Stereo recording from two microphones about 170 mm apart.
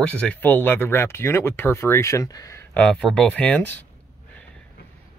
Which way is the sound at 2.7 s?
5° left (ahead or behind).